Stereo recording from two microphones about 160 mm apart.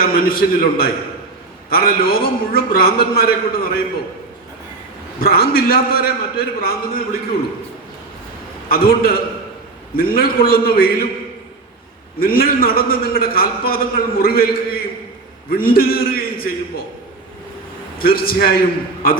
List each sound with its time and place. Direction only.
0.0 s a man's voice: 70° left (ahead or behind)
5.2 s a man's voice: 70° left (ahead or behind)
8.7 s a man's voice: 70° left (ahead or behind)
12.2 s a man's voice: 70° left (ahead or behind)
18.0 s a man's voice: 70° left (ahead or behind)